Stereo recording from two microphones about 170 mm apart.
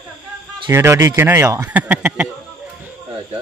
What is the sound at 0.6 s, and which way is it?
Speech, 15° right (ahead or behind).